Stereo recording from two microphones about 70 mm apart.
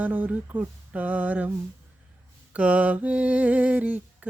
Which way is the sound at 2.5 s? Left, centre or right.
Centre.